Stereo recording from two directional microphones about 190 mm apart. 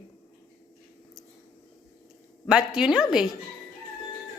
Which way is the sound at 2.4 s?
5° right (ahead or behind).